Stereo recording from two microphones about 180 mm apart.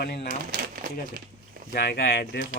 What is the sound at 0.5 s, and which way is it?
Speech, 60° right (ahead or behind).